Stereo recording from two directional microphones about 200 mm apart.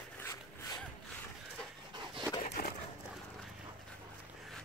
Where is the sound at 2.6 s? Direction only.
50° left (ahead or behind).